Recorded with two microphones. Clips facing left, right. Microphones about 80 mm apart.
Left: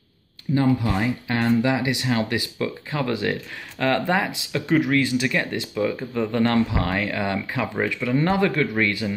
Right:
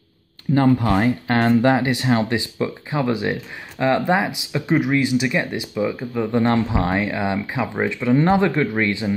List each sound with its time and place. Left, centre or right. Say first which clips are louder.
0.6 s speech: right 4 dB; right; by 6.4 s centre
6.4 s speech: even; right